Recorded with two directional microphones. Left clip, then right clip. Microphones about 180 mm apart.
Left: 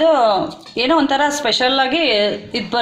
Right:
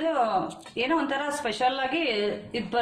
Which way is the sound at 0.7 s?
35° left (ahead or behind).